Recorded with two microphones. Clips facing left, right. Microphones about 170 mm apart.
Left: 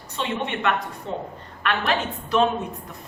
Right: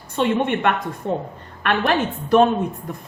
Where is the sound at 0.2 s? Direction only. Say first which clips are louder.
Right 7 dB; 50° right (ahead or behind).